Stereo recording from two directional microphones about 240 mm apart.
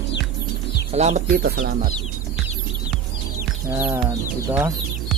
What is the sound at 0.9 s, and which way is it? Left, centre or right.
Speech, right.